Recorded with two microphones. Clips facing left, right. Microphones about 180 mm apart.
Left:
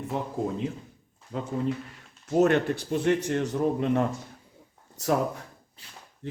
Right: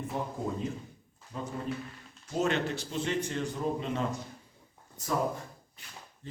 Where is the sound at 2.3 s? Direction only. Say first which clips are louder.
Left 8 dB; 60° left (ahead or behind).